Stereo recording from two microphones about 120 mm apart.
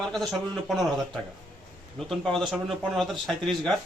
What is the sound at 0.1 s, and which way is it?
Speech, centre (ahead or behind).